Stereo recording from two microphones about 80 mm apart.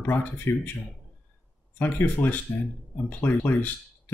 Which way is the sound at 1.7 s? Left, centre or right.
Left.